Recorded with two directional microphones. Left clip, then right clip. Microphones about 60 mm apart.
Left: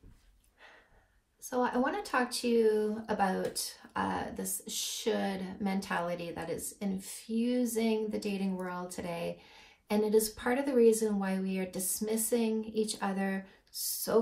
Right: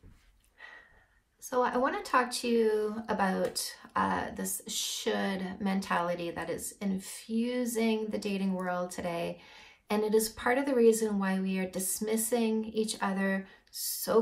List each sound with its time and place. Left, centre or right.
1.4 s speech: right